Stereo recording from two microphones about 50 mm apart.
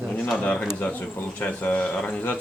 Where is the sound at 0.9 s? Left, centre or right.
Left.